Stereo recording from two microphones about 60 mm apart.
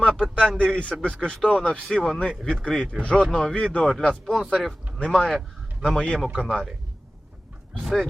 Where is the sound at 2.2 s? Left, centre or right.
Centre.